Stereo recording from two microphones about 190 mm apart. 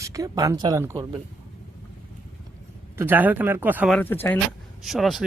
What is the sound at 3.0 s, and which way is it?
Speech, 10° right (ahead or behind).